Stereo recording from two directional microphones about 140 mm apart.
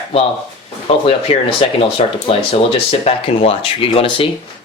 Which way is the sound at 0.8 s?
40° left (ahead or behind).